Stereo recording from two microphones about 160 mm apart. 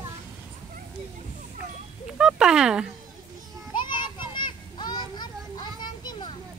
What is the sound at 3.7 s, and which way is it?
Children playing, 30° left (ahead or behind).